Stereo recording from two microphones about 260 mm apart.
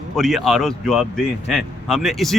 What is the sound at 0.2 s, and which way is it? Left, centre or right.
A man's voice, centre.